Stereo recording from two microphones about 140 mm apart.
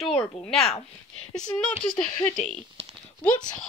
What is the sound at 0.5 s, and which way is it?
Speech, 45° left (ahead or behind).